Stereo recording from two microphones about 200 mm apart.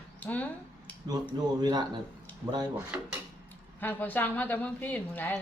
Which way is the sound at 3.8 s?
10° left (ahead or behind).